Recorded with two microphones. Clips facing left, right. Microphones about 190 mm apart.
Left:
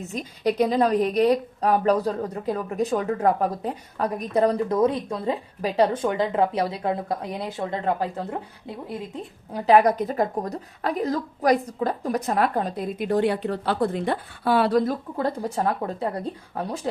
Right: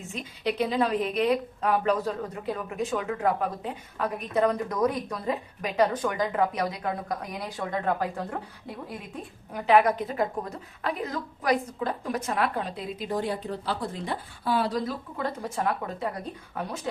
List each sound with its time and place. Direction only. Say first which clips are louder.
0.0 s a woman's voice: left 6 dB; 40° left (ahead or behind)
13.1 s a woman's voice: left 7 dB; 70° left (ahead or behind)
15.2 s a woman's voice: left 4 dB; 35° left (ahead or behind)